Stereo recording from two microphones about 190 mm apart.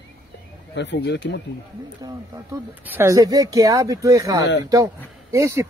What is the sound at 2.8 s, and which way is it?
Speech, 15° right (ahead or behind).